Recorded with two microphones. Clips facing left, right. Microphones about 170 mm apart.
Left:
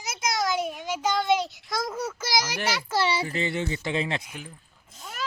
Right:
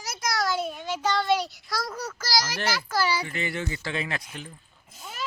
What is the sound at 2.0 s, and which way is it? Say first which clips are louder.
A child's voice: even; 25° left (ahead or behind).